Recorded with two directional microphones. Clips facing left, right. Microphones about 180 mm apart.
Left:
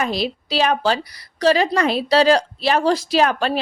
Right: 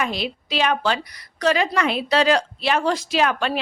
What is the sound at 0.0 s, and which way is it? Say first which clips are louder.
Speech: left 3 dB; 35° left (ahead or behind).